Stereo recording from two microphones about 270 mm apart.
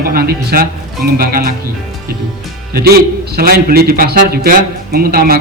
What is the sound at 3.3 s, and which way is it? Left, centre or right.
A man's voice, right.